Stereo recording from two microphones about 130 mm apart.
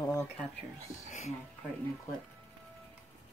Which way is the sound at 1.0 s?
60° left (ahead or behind).